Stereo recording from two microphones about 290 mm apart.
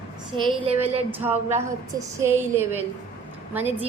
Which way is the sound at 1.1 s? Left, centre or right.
Centre.